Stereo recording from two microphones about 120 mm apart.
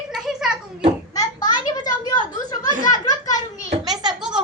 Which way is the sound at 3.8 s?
35° right (ahead or behind).